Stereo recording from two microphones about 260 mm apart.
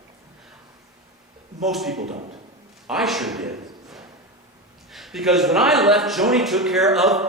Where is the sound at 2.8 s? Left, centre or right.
Centre.